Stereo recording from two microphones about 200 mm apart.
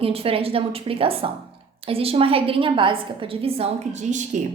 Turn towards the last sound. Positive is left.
turn(degrees=-35)  # may be behind; listen again after turning